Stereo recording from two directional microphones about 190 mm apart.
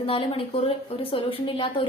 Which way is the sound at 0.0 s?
30° left (ahead or behind).